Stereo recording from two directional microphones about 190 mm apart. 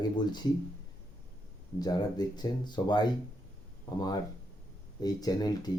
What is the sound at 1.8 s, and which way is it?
Speech, 20° left (ahead or behind).